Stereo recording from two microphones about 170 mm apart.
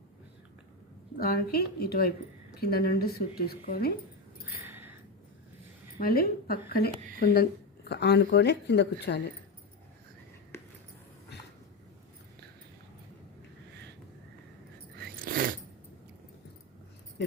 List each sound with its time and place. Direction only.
1.2 s a woman's voice: 60° left (ahead or behind)
4.4 s a sound: 10° right (ahead or behind)
6.0 s a woman's voice: 60° left (ahead or behind)
7.9 s a woman's voice: 80° left
14.9 s biting: 60° right (ahead or behind)